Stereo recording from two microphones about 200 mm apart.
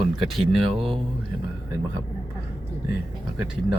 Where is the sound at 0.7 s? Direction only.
25° right (ahead or behind).